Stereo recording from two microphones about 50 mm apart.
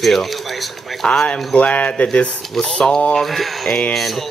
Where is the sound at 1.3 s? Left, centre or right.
Left.